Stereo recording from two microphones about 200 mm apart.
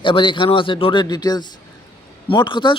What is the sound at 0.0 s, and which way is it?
Speech, 25° left (ahead or behind).